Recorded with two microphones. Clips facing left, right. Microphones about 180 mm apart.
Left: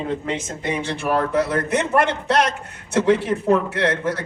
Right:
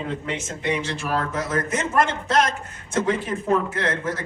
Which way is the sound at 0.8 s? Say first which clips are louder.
Left 4 dB; 60° left (ahead or behind).